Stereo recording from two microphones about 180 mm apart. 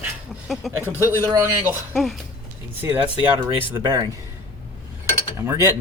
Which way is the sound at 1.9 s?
Centre (ahead or behind).